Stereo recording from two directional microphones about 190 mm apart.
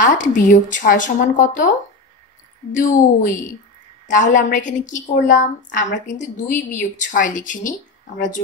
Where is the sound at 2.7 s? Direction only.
40° left (ahead or behind).